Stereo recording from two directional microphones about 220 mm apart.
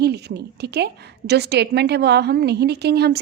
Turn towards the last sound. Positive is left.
turn(degrees=-50)  # may be behind; listen again after turning